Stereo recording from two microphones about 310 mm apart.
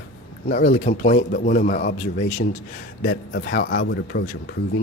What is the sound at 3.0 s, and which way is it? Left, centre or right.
Speech, left.